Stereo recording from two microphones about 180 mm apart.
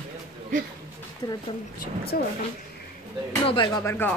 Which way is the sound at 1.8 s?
60° left (ahead or behind).